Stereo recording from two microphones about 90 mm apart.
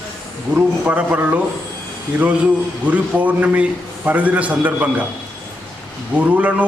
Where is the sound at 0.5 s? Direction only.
15° right (ahead or behind).